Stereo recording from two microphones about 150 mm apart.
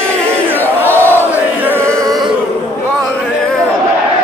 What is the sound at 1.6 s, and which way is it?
Music, 15° right (ahead or behind).